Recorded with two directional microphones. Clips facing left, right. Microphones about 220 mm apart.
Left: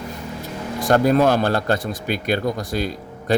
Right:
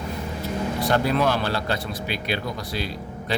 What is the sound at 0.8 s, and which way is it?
Speech, 45° left (ahead or behind).